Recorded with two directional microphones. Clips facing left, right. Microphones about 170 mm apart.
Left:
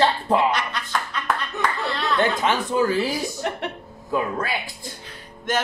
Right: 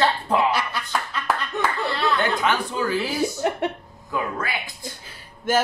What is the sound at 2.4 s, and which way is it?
Speech, 25° left (ahead or behind).